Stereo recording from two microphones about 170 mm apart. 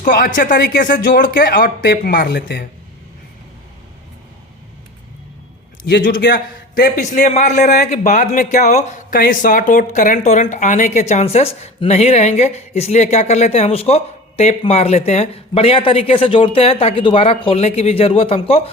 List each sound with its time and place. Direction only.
0.3 s a man's voice: 50° left (ahead or behind)
1.4 s speech: 80° left
1.6 s speech: 65° left (ahead or behind)
6.0 s speech: 55° left (ahead or behind)
6.2 s a man's voice: 85° left; by 18.7 s 35° left (ahead or behind)